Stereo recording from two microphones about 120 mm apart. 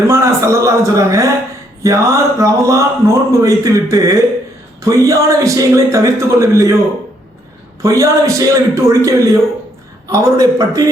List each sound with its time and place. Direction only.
0.1 s speech: 25° right (ahead or behind)
7.8 s speech: 25° right (ahead or behind)